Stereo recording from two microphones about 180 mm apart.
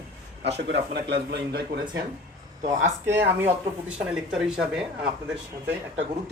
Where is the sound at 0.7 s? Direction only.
70° right (ahead or behind).